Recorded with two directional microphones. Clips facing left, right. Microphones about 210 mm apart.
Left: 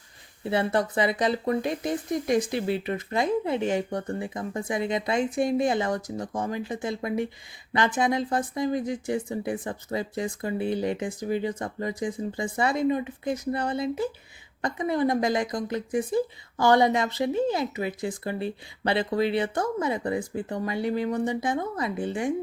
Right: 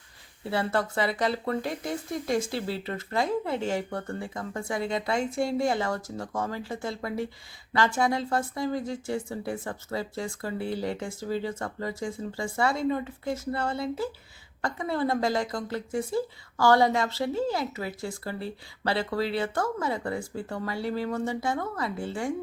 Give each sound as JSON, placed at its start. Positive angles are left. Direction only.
{"t": 0.4, "sound": "a woman's voice", "side_deg": 20}